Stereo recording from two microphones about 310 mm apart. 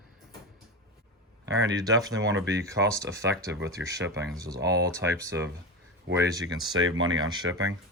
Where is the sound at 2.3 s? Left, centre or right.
Right.